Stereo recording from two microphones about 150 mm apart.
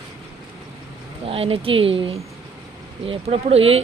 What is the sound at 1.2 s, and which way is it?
Speech, 40° right (ahead or behind).